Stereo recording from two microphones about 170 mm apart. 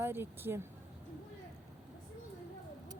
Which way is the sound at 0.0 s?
15° right (ahead or behind).